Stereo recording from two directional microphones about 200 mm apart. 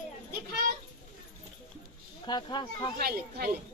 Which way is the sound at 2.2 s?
20° left (ahead or behind).